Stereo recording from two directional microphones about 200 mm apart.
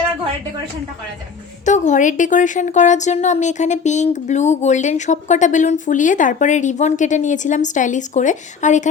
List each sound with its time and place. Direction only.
1.6 s a woman's voice: 35° left (ahead or behind)